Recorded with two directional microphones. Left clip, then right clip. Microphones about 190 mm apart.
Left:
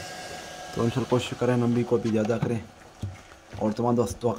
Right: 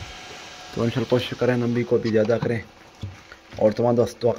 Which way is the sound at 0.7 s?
5° left (ahead or behind).